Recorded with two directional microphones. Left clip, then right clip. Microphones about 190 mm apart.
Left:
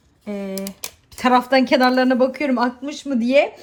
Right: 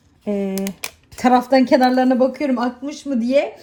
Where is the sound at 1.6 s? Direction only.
20° right (ahead or behind).